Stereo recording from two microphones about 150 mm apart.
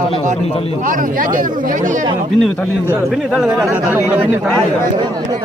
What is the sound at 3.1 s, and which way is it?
Speech, centre (ahead or behind).